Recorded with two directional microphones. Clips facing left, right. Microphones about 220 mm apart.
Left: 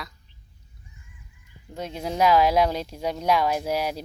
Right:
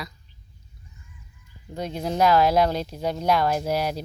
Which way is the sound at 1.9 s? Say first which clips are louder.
Even; 10° left (ahead or behind).